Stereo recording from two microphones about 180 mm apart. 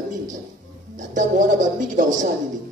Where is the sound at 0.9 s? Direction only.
45° right (ahead or behind).